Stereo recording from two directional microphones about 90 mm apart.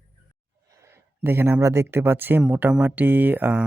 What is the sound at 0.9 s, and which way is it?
Speech, 25° right (ahead or behind).